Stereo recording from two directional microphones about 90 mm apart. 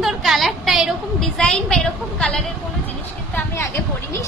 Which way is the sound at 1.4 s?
10° left (ahead or behind).